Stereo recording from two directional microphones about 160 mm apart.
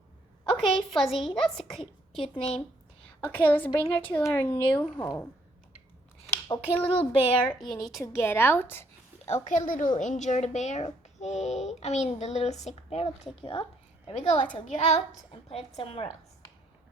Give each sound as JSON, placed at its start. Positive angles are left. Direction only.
{"t": 0.6, "sound": "a woman's voice", "side_deg": 0}
{"t": 1.8, "sound": "a woman's voice", "side_deg": 35}
{"t": 3.2, "sound": "a woman's voice", "side_deg": 15}
{"t": 6.5, "sound": "speech", "side_deg": 30}
{"t": 7.5, "sound": "a woman's voice", "side_deg": 0}
{"t": 8.0, "sound": "a woman's voice", "side_deg": 15}
{"t": 9.5, "sound": "a woman's voice", "side_deg": 55}
{"t": 14.1, "sound": "speech", "side_deg": 45}